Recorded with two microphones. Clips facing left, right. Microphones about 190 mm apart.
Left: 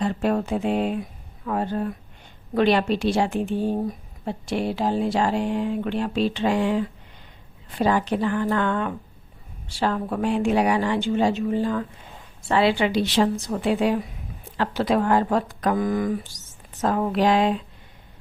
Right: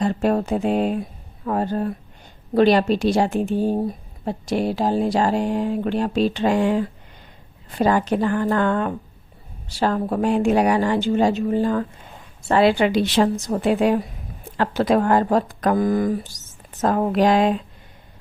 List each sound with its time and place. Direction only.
0.0 s a woman's voice: 40° right (ahead or behind)